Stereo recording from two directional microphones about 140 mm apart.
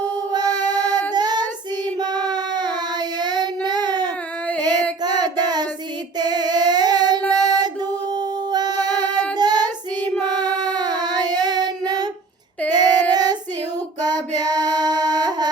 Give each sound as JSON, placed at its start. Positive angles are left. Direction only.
{"t": 0.3, "sound": "female singing", "side_deg": -30}
{"t": 1.1, "sound": "child singing", "side_deg": -30}
{"t": 7.3, "sound": "female singing", "side_deg": -30}
{"t": 9.4, "sound": "child singing", "side_deg": -30}
{"t": 14.0, "sound": "female singing", "side_deg": -30}